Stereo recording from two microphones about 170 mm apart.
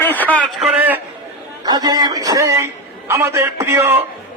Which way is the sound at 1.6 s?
25° right (ahead or behind).